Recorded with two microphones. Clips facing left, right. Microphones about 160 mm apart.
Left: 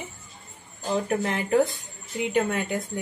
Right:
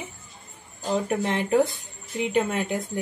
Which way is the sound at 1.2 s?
20° right (ahead or behind).